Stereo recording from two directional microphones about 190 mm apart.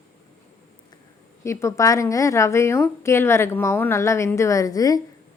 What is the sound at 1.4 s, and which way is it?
A woman's voice, 15° left (ahead or behind).